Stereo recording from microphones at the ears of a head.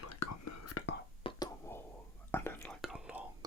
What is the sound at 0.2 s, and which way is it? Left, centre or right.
Whispering, left.